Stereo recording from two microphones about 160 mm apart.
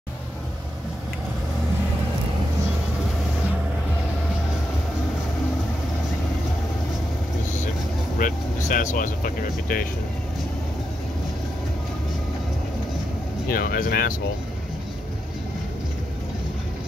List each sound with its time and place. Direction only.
8.2 s speech: 60° left (ahead or behind)
13.5 s speech: 65° left (ahead or behind)